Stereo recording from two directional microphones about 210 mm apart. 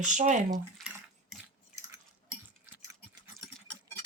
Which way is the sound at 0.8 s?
Centre (ahead or behind).